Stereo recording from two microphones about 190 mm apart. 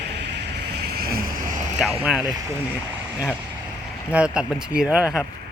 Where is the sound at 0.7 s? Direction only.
55° right (ahead or behind).